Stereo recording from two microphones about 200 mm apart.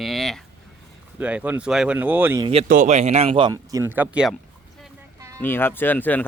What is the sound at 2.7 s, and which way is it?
Speech, 35° right (ahead or behind).